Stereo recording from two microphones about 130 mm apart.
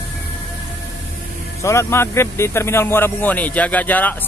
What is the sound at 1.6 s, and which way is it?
Speech, 20° left (ahead or behind).